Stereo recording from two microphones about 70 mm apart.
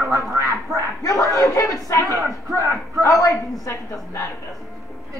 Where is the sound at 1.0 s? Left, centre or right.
Left.